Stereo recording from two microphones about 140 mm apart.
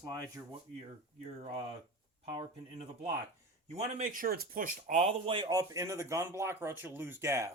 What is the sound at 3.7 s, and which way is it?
Speech, 70° right (ahead or behind).